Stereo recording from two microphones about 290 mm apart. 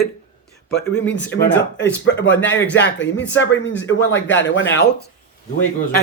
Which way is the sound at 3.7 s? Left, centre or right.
Centre.